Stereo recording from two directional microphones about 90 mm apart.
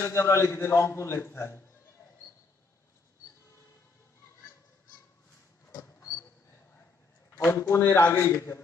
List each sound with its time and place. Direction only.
0.0 s a man's voice: 30° left (ahead or behind)
5.8 s a sound: 30° left (ahead or behind)
7.4 s a man's voice: 25° left (ahead or behind)